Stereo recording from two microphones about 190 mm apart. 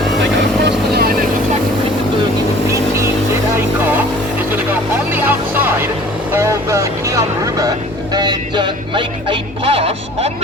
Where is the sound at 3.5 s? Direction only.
10° right (ahead or behind).